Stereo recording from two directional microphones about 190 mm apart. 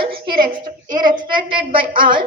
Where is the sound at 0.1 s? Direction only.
55° right (ahead or behind).